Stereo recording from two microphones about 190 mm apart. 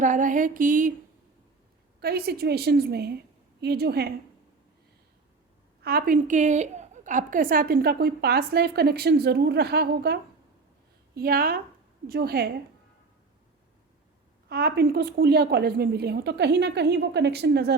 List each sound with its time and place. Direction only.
0.0 s a woman's voice: 40° right (ahead or behind)
2.0 s a woman's voice: 55° right (ahead or behind)
5.8 s a woman's voice: 50° right (ahead or behind)
14.5 s a woman's voice: 55° right (ahead or behind)